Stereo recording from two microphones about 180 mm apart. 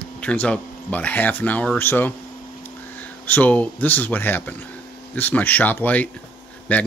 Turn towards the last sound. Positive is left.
turn(degrees=10)  # may be behind; listen again after turning